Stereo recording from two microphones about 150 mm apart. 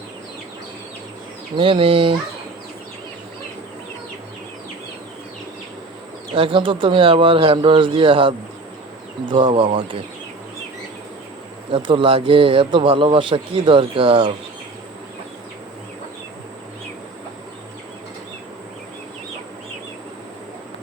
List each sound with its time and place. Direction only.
1.5 s speech: 35° right (ahead or behind)
6.3 s speech: 35° right (ahead or behind)
11.7 s speech: 35° right (ahead or behind)